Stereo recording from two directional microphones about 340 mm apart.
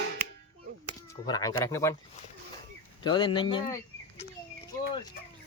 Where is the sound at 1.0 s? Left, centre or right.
Centre.